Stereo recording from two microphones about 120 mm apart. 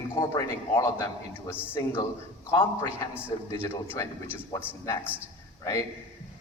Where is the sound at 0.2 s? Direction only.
30° left (ahead or behind).